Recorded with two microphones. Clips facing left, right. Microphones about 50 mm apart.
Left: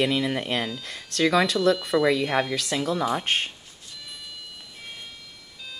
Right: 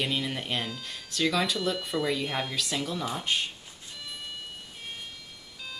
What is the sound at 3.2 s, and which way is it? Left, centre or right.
Speech, left.